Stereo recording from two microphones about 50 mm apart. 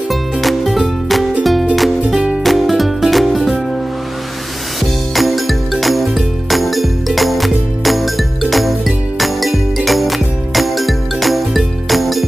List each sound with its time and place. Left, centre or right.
0.1 s music: centre
2.1 s music: centre
2.4 s music: centre
5.1 s music: centre